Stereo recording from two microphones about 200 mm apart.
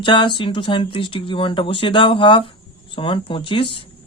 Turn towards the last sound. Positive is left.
turn(degrees=25)  # may be behind; listen again after turning